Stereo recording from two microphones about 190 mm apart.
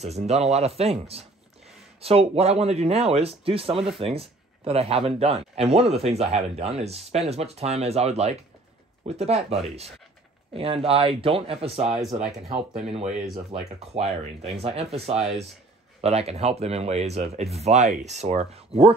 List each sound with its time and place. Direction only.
0.0 s speech: 35° right (ahead or behind)
13.5 s speech: 35° right (ahead or behind)